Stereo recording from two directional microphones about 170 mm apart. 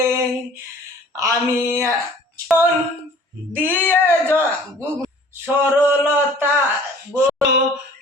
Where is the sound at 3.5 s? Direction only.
10° right (ahead or behind).